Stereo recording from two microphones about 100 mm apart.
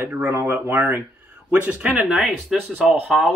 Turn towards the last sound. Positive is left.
turn(degrees=-5)  # may be behind; listen again after turning